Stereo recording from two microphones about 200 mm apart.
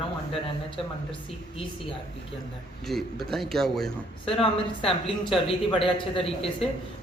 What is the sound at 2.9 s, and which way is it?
A man's voice, centre (ahead or behind).